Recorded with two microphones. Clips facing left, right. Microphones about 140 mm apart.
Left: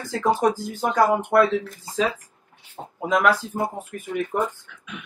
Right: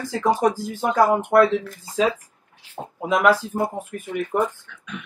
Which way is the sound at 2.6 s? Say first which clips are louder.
Right 16 dB; 90° right.